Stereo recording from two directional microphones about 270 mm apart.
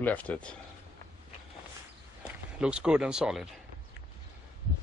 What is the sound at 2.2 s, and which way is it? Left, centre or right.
Speech, centre.